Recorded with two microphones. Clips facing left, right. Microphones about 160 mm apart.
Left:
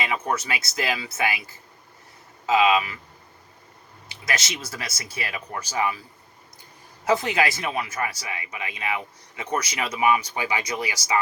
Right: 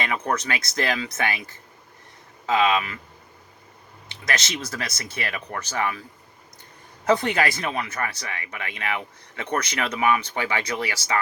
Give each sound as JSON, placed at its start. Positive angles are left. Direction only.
{"t": 0.0, "sound": "speech", "side_deg": 5}
{"t": 4.1, "sound": "speech", "side_deg": 5}
{"t": 7.0, "sound": "speech", "side_deg": 5}